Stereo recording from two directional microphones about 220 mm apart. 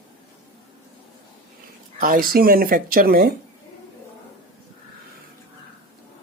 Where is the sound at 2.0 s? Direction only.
40° right (ahead or behind).